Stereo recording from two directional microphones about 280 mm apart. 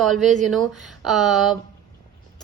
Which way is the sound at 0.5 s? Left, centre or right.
Centre.